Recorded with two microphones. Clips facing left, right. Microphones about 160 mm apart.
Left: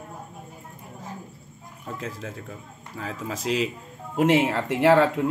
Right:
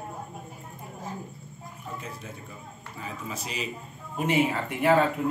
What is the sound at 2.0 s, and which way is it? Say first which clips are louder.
A man's voice: left 5 dB; 90° left.